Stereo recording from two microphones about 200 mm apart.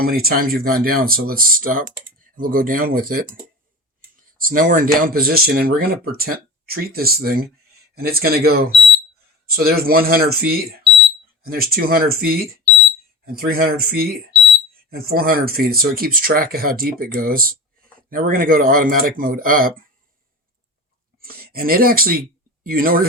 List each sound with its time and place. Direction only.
0.0 s speech: 50° right (ahead or behind)
4.4 s speech: 45° right (ahead or behind)
21.2 s speech: 50° right (ahead or behind)